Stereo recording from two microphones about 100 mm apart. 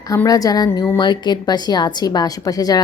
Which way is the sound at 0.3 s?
40° left (ahead or behind).